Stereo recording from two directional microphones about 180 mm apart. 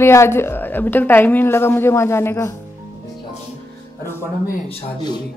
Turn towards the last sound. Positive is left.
turn(degrees=25)  # may be behind; listen again after turning